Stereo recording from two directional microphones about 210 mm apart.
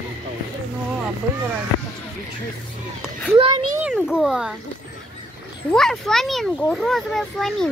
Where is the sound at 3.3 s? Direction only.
25° right (ahead or behind).